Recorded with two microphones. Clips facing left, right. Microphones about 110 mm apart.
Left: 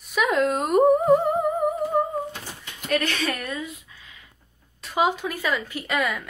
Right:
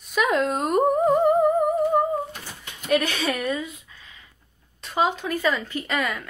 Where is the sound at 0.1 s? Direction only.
Centre (ahead or behind).